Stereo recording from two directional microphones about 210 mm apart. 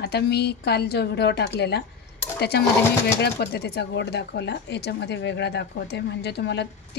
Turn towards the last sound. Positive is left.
turn(degrees=55)  # may be behind; listen again after turning